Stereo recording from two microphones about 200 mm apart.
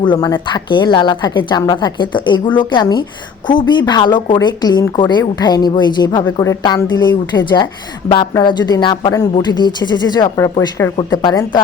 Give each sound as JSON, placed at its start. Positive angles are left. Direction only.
{"t": 0.0, "sound": "speech", "side_deg": 20}